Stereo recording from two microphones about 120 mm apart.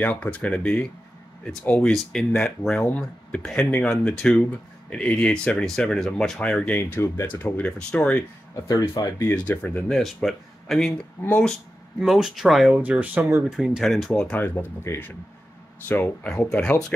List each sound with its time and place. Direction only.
0.0 s speech: 15° left (ahead or behind)
6.8 s speech: 20° left (ahead or behind)
8.6 s speech: 30° left (ahead or behind)
9.5 s speech: 15° left (ahead or behind)
9.8 s speech: centre (ahead or behind)
11.2 s speech: 15° left (ahead or behind)
12.0 s speech: centre (ahead or behind); by 16.3 s 15° left (ahead or behind)
16.3 s speech: 5° left (ahead or behind)